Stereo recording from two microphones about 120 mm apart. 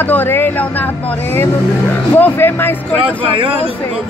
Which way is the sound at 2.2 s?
15° left (ahead or behind).